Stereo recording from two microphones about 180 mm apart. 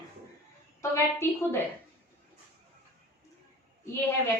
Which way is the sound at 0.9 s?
15° left (ahead or behind).